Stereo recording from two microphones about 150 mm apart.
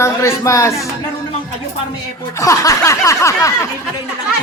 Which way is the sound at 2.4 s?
20° left (ahead or behind).